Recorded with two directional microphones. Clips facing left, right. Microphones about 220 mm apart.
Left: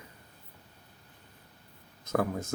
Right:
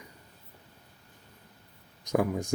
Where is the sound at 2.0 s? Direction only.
15° right (ahead or behind).